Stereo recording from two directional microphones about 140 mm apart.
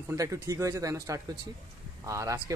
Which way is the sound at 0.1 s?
20° right (ahead or behind).